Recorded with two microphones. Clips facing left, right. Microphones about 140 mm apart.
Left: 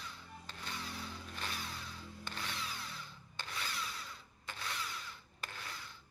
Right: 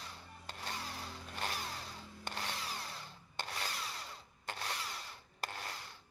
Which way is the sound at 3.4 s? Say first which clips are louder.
Even; 40° right (ahead or behind).